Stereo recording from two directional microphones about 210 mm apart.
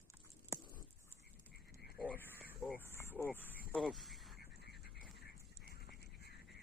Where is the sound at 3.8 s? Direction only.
Centre (ahead or behind).